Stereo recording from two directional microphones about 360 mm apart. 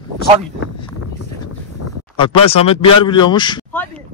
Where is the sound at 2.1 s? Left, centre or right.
Centre.